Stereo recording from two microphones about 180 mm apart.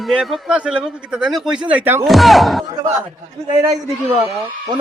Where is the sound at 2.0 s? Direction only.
Centre (ahead or behind).